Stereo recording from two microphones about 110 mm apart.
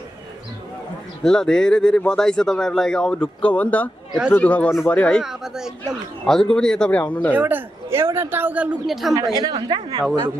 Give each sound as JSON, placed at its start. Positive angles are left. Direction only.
{"t": 1.2, "sound": "speech", "side_deg": 5}
{"t": 5.2, "sound": "speech", "side_deg": -5}
{"t": 7.3, "sound": "speech", "side_deg": -15}
{"t": 8.8, "sound": "speech", "side_deg": 0}
{"t": 9.3, "sound": "a woman's voice", "side_deg": -40}